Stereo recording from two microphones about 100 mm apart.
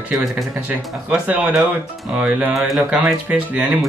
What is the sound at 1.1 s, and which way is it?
Speech, 15° right (ahead or behind).